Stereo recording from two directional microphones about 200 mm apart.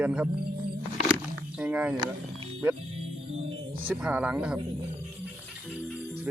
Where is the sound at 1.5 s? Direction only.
5° right (ahead or behind).